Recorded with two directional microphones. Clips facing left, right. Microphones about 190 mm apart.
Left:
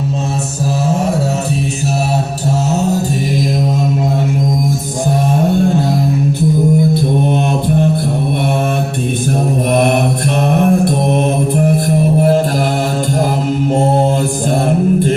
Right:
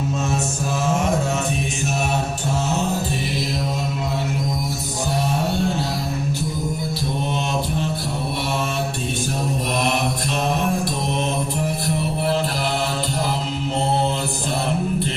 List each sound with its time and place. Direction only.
9.7 s mantra: 55° left (ahead or behind)
11.5 s music: 55° left (ahead or behind)
14.7 s music: 50° left (ahead or behind)